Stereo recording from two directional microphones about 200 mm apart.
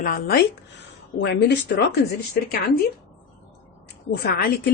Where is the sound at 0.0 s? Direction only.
50° left (ahead or behind).